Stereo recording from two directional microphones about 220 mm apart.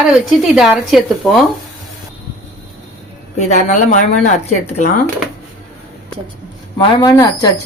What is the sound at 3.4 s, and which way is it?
Speech, 30° left (ahead or behind).